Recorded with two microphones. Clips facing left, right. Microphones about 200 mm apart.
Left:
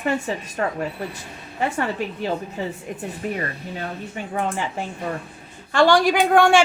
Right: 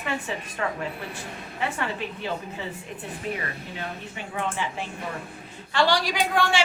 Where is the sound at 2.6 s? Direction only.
40° left (ahead or behind).